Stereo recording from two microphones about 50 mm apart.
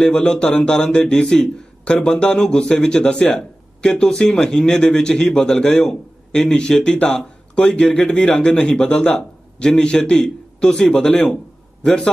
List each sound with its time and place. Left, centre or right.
0.0 s a man's voice: centre